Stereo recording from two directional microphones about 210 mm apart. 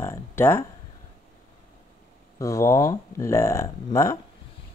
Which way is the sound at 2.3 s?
15° left (ahead or behind).